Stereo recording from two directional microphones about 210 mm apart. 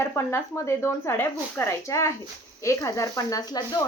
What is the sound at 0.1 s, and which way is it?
Speech, 15° left (ahead or behind).